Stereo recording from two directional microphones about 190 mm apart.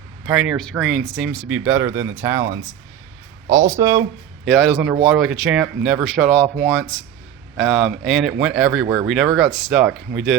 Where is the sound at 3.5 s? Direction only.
15° right (ahead or behind).